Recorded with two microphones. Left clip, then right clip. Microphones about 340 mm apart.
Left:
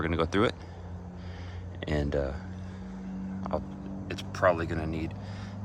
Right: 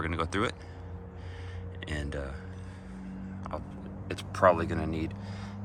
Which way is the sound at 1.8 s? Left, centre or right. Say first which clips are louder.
Left 7 dB; centre.